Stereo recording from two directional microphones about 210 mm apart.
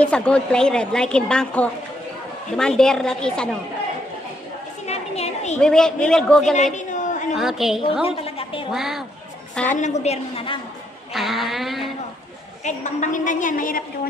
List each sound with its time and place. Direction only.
0.0 s a woman's voice: 5° left (ahead or behind)
4.8 s a sound: 30° left (ahead or behind)
5.6 s a woman's voice: 5° left (ahead or behind)
6.5 s chatter: 35° left (ahead or behind)
7.3 s a woman's voice: centre (ahead or behind)
8.2 s a sound: 25° left (ahead or behind)
8.7 s a woman's voice: centre (ahead or behind)
9.8 s a woman's voice: 35° left (ahead or behind)
11.1 s a woman's voice: centre (ahead or behind)
12.6 s a woman's voice: 35° left (ahead or behind)